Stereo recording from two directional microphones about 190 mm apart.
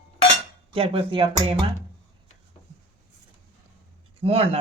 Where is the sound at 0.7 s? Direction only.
30° right (ahead or behind).